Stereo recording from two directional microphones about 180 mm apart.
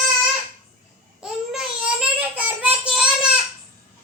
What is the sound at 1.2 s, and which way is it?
Child singing, 5° right (ahead or behind).